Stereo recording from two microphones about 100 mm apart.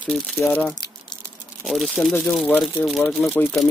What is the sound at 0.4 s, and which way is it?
Speech, 20° left (ahead or behind).